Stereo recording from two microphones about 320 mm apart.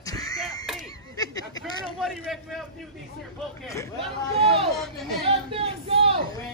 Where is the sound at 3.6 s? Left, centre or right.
Centre.